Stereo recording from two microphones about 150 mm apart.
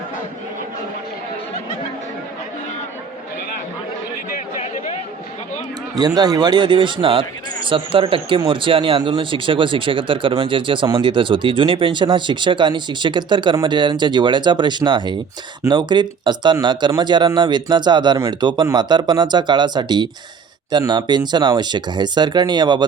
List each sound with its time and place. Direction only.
6.0 s speech: 25° right (ahead or behind)